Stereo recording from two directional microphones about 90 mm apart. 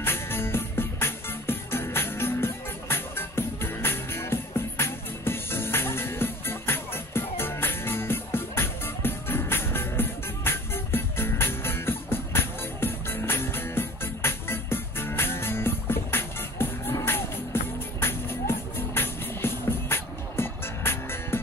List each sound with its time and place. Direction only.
0.0 s music: 25° left (ahead or behind)